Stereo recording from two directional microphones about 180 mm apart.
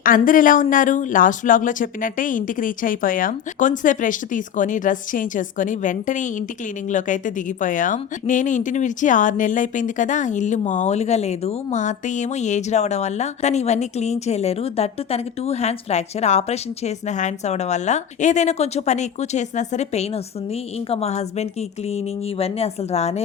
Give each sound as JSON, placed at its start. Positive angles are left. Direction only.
{"t": 0.0, "sound": "a woman's voice", "side_deg": 50}